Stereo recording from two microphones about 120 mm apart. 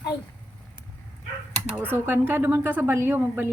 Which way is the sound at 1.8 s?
20° right (ahead or behind).